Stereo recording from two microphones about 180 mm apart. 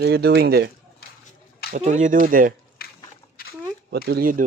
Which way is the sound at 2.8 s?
60° left (ahead or behind).